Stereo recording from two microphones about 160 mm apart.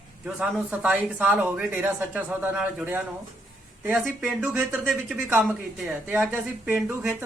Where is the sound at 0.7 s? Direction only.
10° right (ahead or behind).